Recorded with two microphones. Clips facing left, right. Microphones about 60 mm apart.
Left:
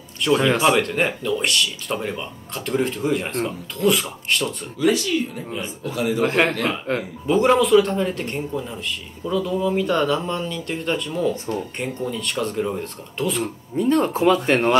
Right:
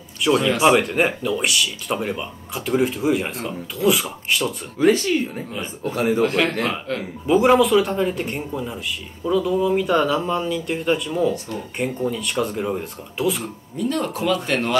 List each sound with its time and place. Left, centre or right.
0.2 s speech: centre
0.6 s speech: centre
0.8 s speech: centre
4.7 s speech: right
6.2 s a man's voice: left
7.2 s speech: centre
13.7 s speech: left